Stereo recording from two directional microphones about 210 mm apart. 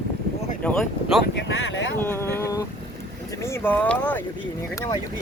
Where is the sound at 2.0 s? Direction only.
10° left (ahead or behind).